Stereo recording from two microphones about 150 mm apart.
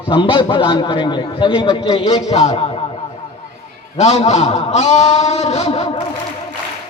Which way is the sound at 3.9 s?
45° left (ahead or behind).